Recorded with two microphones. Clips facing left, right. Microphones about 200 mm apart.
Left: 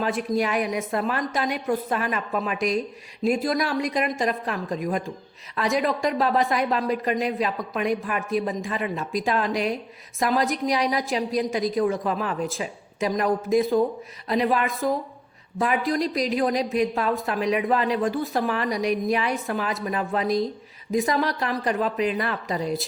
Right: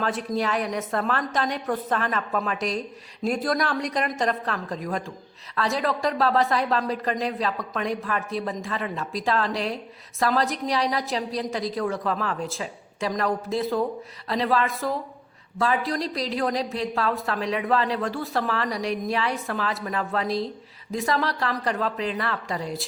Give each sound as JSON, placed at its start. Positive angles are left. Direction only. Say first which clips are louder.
{"t": 0.0, "sound": "a woman's voice", "louder": "left 2 dB", "side_deg": 10}